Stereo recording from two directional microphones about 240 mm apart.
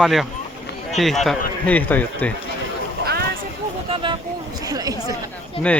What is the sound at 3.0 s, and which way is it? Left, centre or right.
Vehicle, right.